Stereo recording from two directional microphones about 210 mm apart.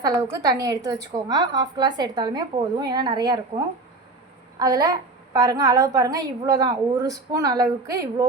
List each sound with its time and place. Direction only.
0.0 s a woman's voice: 20° right (ahead or behind)
4.6 s a woman's voice: 20° right (ahead or behind)